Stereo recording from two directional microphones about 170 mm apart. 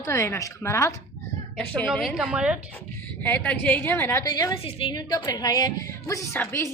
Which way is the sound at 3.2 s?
10° left (ahead or behind).